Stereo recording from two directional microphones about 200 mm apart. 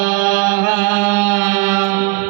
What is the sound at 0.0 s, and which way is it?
Music, 15° right (ahead or behind).